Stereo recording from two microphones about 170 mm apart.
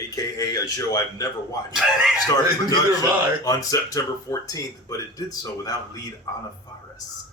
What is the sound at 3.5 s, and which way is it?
Speech, 20° left (ahead or behind).